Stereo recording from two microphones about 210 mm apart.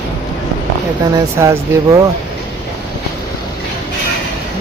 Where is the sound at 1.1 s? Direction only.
15° right (ahead or behind).